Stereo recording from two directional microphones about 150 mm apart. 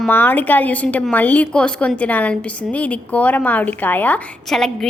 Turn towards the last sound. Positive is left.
turn(degrees=5)  # may be behind; listen again after turning